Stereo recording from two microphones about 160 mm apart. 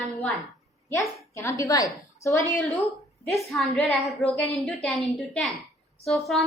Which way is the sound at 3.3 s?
Centre (ahead or behind).